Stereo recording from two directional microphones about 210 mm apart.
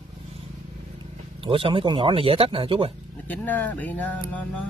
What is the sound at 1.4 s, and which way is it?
Speech, 25° right (ahead or behind).